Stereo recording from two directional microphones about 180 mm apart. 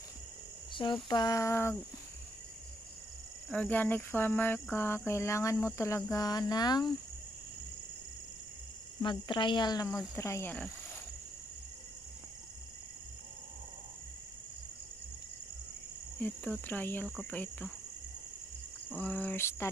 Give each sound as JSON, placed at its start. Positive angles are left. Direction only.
{"t": 1.0, "sound": "speech", "side_deg": 20}
{"t": 3.4, "sound": "speech", "side_deg": 5}
{"t": 9.0, "sound": "speech", "side_deg": 25}
{"t": 16.2, "sound": "speech", "side_deg": 10}
{"t": 18.9, "sound": "speech", "side_deg": 10}